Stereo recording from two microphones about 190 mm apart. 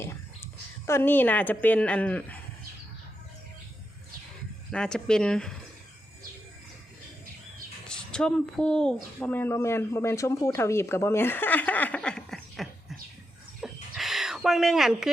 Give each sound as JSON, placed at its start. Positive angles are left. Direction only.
{"t": 0.9, "sound": "speech", "side_deg": 10}
{"t": 4.7, "sound": "speech", "side_deg": 5}
{"t": 7.9, "sound": "speech", "side_deg": 5}
{"t": 13.6, "sound": "bird", "side_deg": 0}